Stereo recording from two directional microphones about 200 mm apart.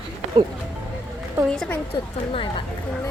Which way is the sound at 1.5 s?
5° left (ahead or behind).